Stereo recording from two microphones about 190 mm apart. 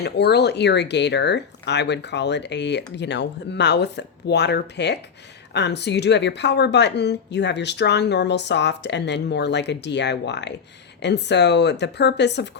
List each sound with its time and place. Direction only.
0.0 s speech: 60° left (ahead or behind)